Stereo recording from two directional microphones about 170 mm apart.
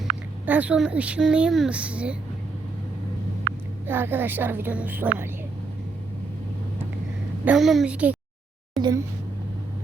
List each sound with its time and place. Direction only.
0.0 s a woman's voice: 10° right (ahead or behind)
3.8 s a woman's voice: 10° right (ahead or behind)
7.4 s a woman's voice: centre (ahead or behind)
8.8 s a sound: 20° right (ahead or behind)